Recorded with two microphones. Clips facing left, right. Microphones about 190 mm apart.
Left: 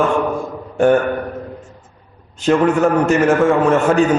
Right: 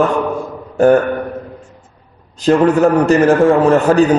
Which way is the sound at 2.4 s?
35° right (ahead or behind).